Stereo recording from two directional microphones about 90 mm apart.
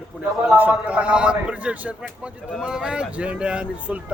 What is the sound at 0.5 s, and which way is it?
Speech, 20° right (ahead or behind).